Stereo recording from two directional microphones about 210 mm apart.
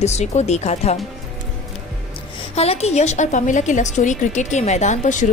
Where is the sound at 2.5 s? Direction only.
30° left (ahead or behind).